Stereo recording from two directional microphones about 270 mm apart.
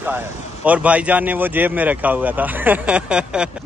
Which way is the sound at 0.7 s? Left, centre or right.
Centre.